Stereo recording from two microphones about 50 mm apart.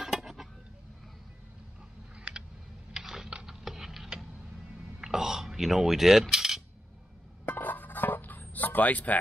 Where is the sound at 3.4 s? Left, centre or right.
Centre.